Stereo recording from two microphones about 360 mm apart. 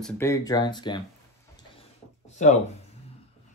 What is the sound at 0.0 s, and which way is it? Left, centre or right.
Speech, centre.